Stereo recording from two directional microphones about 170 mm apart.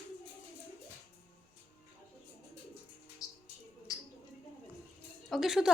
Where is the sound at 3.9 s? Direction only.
20° left (ahead or behind).